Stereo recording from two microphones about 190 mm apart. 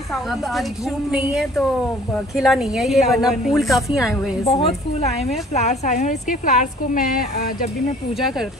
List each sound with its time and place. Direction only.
0.1 s a woman's voice: centre (ahead or behind)
4.5 s a woman's voice: 30° left (ahead or behind); by 7.4 s 50° left (ahead or behind)